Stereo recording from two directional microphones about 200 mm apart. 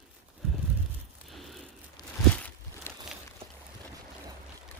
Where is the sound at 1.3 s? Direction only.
Centre (ahead or behind).